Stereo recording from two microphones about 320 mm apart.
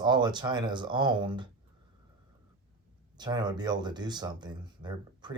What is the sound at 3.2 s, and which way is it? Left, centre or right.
Speech, centre.